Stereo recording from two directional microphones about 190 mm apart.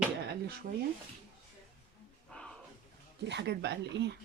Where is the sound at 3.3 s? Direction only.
65° right (ahead or behind).